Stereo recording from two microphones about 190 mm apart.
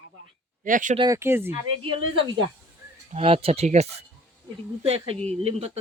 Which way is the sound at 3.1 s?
30° right (ahead or behind).